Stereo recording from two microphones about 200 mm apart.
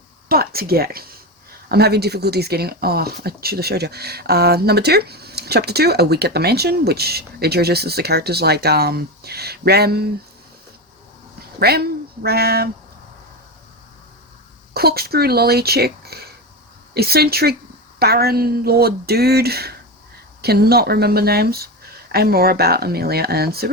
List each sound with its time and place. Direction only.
0.3 s speech: 50° right (ahead or behind)
11.6 s speech: 50° right (ahead or behind)
14.7 s speech: 50° right (ahead or behind)